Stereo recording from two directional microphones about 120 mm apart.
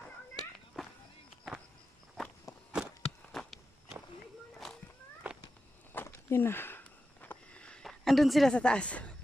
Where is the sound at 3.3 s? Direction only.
Centre (ahead or behind).